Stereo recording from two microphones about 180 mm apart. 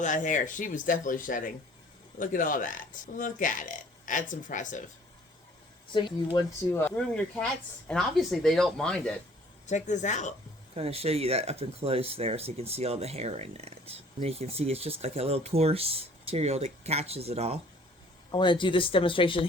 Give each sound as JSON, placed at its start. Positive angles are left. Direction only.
{"t": 0.0, "sound": "speech", "side_deg": 45}
{"t": 5.9, "sound": "speech", "side_deg": 25}
{"t": 6.7, "sound": "speech", "side_deg": 10}
{"t": 9.6, "sound": "speech", "side_deg": 40}
{"t": 10.8, "sound": "speech", "side_deg": -35}
{"t": 18.3, "sound": "speech", "side_deg": 25}